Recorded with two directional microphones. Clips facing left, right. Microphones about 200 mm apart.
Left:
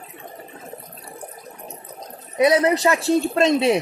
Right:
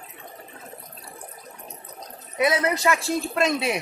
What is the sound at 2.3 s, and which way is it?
Speech, 35° left (ahead or behind).